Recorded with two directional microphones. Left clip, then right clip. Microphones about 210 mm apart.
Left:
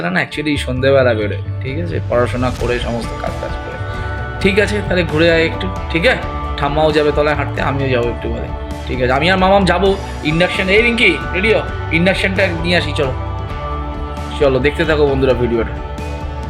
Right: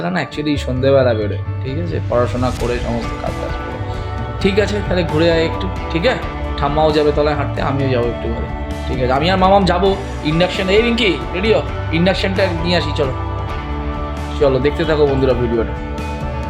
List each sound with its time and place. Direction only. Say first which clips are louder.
0.0 s speech: left 3 dB; centre (ahead or behind)
4.4 s speech: left 2 dB; centre (ahead or behind)
14.3 s speech: left 1 dB; centre (ahead or behind)